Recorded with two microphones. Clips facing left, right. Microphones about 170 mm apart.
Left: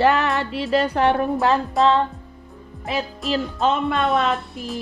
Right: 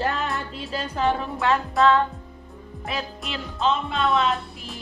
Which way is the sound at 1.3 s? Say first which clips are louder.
Left 4 dB; 35° left (ahead or behind).